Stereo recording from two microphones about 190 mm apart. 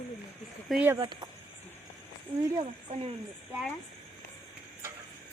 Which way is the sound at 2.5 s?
25° right (ahead or behind).